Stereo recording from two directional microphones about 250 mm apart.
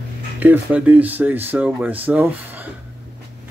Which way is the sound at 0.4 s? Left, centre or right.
Centre.